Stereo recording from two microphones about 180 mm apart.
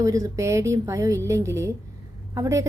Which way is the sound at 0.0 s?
20° right (ahead or behind).